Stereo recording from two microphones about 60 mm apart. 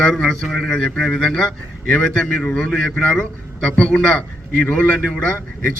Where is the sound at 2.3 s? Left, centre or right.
Centre.